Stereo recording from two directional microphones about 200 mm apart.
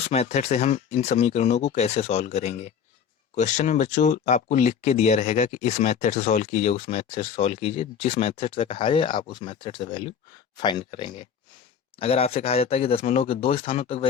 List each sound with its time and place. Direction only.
0.1 s speech: 30° left (ahead or behind)